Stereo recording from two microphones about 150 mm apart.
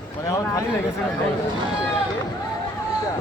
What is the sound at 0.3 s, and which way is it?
Speech, 20° left (ahead or behind).